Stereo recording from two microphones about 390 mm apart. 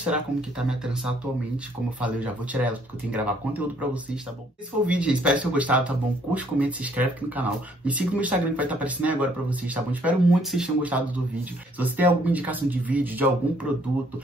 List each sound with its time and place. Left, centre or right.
0.0 s speech: centre